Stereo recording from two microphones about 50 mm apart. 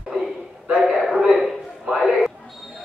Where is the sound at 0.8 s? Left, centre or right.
Centre.